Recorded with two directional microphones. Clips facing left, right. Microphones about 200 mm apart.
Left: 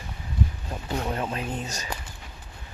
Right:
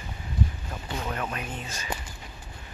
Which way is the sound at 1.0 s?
25° left (ahead or behind).